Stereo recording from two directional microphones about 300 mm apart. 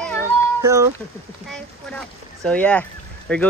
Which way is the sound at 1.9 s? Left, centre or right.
Centre.